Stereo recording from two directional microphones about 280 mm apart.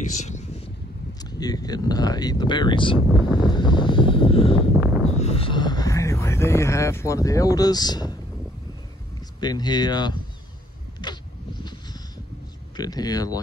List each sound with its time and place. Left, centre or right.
0.0 s vehicle: left
1.2 s speech: centre
3.4 s vehicle: centre
5.0 s speech: left
9.4 s speech: centre
11.0 s a sound: centre
12.7 s speech: centre